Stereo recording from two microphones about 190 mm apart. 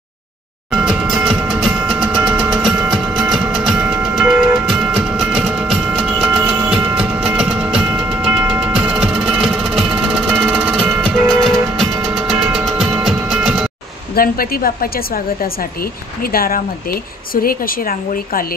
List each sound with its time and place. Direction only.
0.7 s music: 5° right (ahead or behind)
14.1 s a woman's voice: 50° left (ahead or behind)